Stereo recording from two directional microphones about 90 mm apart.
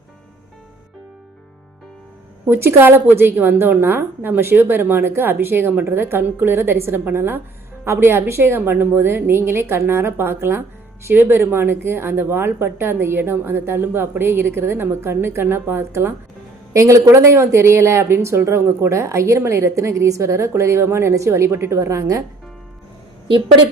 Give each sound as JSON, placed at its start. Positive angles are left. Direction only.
{"t": 2.5, "sound": "a woman's voice", "side_deg": -25}
{"t": 23.3, "sound": "a woman's voice", "side_deg": -65}